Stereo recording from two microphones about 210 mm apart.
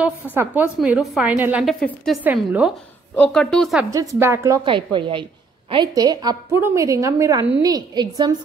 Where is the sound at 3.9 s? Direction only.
15° right (ahead or behind).